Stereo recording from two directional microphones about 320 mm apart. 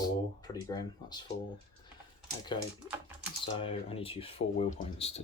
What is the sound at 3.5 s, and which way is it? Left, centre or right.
Speech, centre.